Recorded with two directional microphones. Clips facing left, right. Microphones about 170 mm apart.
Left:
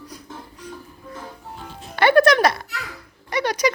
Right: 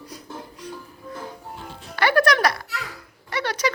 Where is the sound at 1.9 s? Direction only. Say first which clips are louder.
Left 5 dB; 25° left (ahead or behind).